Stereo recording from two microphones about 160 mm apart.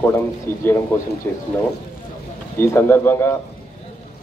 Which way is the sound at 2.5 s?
15° left (ahead or behind).